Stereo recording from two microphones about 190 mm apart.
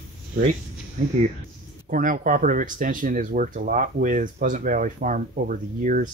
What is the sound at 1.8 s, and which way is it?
Speech, 45° right (ahead or behind).